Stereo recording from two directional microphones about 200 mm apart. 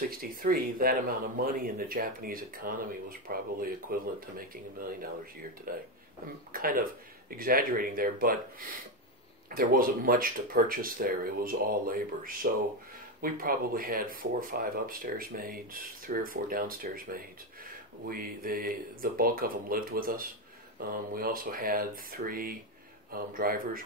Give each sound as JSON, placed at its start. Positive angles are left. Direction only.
{"t": 0.1, "sound": "speech", "side_deg": -45}